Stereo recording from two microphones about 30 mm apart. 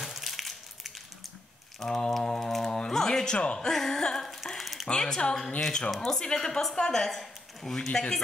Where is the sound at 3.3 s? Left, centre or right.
Left.